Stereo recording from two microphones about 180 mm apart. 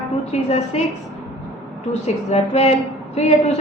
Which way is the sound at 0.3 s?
35° left (ahead or behind).